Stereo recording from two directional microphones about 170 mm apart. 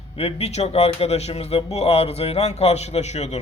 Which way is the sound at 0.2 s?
35° left (ahead or behind).